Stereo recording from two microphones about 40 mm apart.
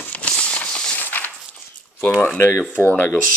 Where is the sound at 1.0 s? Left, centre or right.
Left.